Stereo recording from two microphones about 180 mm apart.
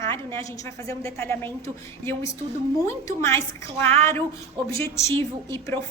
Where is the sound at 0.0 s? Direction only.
15° left (ahead or behind).